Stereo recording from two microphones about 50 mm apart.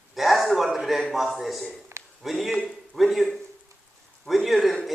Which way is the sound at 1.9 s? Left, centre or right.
Right.